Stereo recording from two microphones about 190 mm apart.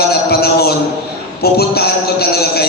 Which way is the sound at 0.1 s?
55° left (ahead or behind).